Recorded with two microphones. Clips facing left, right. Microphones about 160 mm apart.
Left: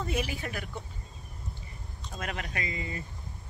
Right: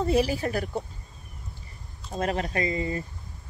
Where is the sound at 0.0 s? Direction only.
35° right (ahead or behind).